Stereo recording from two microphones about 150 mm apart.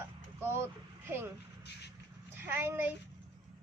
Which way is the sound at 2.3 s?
15° right (ahead or behind).